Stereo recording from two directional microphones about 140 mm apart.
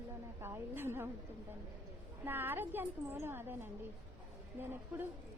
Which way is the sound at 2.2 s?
15° right (ahead or behind).